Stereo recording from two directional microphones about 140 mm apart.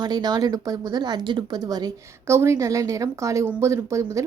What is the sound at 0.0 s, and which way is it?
Speech, 30° right (ahead or behind).